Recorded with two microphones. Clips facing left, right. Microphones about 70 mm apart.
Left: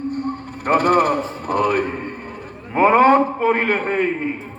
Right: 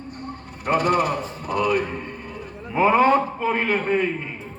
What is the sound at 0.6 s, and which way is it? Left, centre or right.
A man's voice, left.